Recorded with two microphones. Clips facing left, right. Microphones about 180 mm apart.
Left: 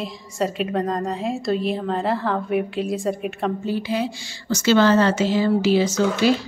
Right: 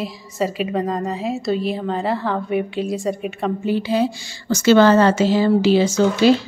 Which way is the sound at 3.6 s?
25° right (ahead or behind).